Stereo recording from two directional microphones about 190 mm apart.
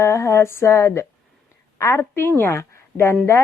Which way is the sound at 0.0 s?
15° left (ahead or behind).